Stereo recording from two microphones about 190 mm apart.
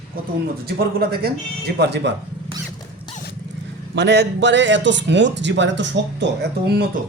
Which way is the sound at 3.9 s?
65° right (ahead or behind).